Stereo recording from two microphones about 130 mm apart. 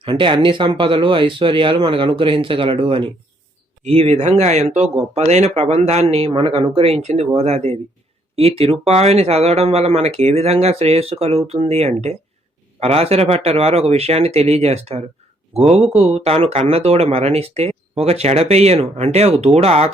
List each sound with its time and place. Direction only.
0.0 s speech: 40° right (ahead or behind)
3.8 s speech: 55° right (ahead or behind)